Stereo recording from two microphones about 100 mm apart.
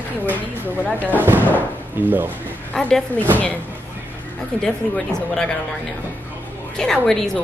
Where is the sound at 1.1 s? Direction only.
20° right (ahead or behind).